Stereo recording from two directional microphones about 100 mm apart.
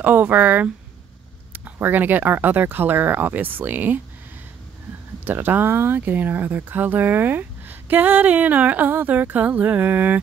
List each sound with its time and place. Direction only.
0.0 s speech: 20° right (ahead or behind)
5.2 s speech: 20° right (ahead or behind)